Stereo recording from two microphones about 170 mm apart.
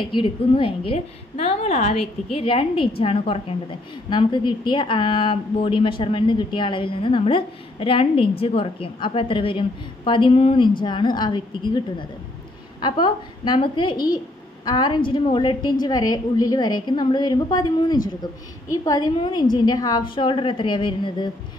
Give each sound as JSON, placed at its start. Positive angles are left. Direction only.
{"t": 0.0, "sound": "a woman's voice", "side_deg": 30}
{"t": 12.8, "sound": "a woman's voice", "side_deg": 25}